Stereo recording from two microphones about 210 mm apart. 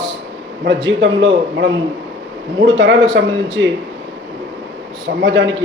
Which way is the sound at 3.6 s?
60° right (ahead or behind).